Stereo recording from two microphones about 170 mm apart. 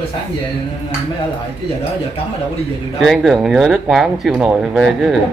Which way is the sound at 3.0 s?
Centre (ahead or behind).